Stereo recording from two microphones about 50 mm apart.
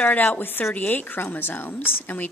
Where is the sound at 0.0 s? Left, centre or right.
Left.